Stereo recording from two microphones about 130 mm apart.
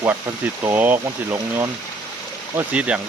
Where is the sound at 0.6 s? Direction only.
15° right (ahead or behind).